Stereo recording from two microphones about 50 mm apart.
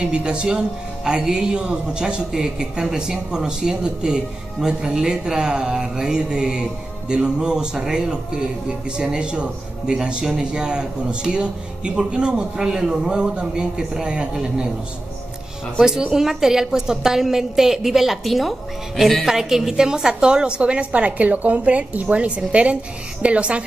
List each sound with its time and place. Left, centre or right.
0.0 s speech: centre
15.8 s speech: centre
19.2 s a woman's voice: centre